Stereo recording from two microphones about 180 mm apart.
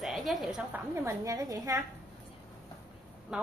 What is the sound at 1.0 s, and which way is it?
Speech, 15° right (ahead or behind).